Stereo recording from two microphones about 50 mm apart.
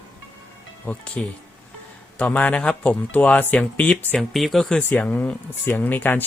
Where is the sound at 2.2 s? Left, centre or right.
Left.